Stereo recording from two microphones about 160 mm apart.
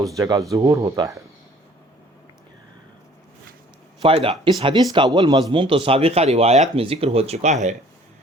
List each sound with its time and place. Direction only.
0.2 s speech: 20° right (ahead or behind)
4.0 s speech: 35° right (ahead or behind)